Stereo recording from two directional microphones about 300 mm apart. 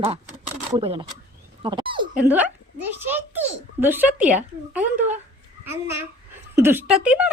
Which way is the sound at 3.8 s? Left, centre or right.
Centre.